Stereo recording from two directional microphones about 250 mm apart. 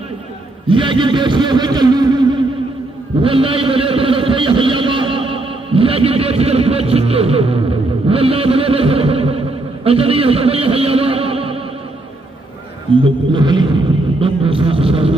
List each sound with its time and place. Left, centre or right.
0.7 s a man's voice: centre
13.3 s a man's voice: centre